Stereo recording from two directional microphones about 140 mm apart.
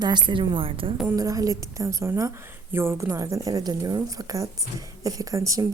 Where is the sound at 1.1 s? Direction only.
25° right (ahead or behind).